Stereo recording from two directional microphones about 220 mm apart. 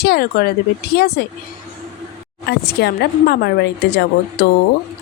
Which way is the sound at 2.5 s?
45° left (ahead or behind).